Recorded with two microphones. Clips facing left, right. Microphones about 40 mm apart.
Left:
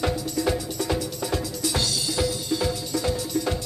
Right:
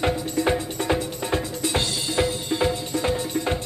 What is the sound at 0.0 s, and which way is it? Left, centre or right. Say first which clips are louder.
Music: right 2 dB; right.